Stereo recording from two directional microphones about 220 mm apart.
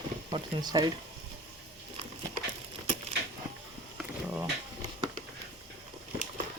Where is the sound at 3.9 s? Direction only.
10° right (ahead or behind).